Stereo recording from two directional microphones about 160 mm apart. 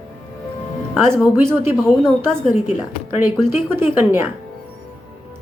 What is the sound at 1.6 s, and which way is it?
Speech, 15° right (ahead or behind).